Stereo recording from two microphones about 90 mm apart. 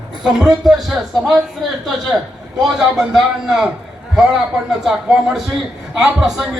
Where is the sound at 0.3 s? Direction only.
5° right (ahead or behind).